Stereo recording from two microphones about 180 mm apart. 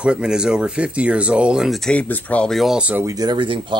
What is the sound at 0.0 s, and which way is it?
Speech, 5° right (ahead or behind).